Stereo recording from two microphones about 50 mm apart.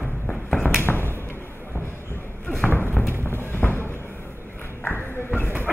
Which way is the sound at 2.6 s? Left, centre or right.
Left.